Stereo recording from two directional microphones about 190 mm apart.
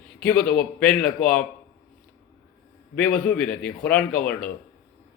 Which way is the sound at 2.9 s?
5° left (ahead or behind).